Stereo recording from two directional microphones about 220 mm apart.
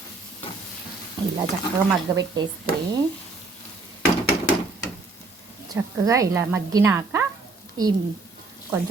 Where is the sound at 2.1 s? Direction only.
15° right (ahead or behind).